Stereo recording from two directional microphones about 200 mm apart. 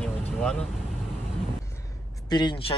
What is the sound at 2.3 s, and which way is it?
Speech, 25° left (ahead or behind).